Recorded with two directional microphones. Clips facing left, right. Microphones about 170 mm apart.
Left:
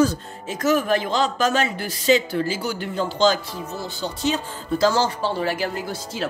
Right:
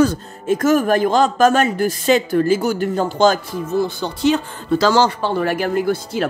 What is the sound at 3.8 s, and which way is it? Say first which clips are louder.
Speech: right 4 dB; 60° right (ahead or behind).